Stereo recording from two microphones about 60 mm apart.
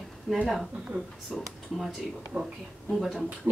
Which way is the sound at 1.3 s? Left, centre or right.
Centre.